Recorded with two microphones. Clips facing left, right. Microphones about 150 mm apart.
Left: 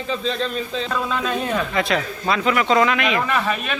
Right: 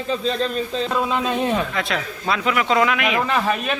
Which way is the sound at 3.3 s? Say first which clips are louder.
Right 1 dB; 25° right (ahead or behind).